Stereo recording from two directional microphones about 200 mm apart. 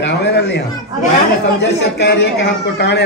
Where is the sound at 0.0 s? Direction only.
55° left (ahead or behind).